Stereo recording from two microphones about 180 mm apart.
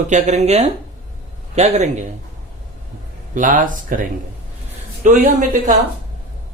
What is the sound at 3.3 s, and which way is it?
Speech, 45° right (ahead or behind).